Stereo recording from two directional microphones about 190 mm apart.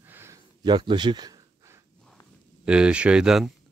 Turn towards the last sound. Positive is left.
turn(degrees=-5)  # may be behind; listen again after turning